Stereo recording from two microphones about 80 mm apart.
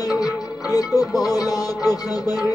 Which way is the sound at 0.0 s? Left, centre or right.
Left.